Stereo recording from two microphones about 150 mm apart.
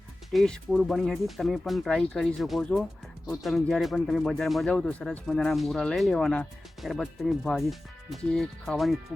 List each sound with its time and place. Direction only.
0.3 s speech: centre (ahead or behind)